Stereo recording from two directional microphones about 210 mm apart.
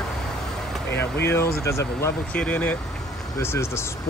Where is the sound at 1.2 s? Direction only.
10° left (ahead or behind).